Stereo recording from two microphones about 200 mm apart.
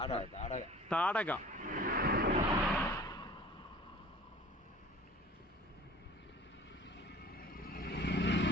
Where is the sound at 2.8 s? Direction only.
15° left (ahead or behind).